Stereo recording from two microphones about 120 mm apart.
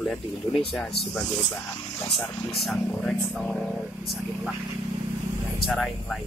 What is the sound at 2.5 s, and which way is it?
Speech, centre (ahead or behind).